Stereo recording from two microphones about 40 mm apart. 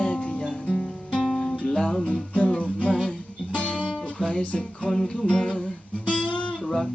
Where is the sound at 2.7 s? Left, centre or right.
Left.